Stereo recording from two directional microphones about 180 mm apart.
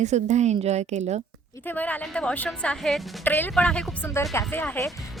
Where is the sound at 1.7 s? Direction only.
10° left (ahead or behind).